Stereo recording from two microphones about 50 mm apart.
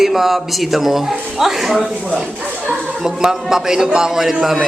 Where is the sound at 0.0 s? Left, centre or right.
Centre.